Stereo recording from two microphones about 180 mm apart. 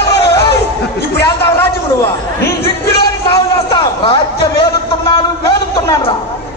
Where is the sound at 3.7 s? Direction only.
30° left (ahead or behind).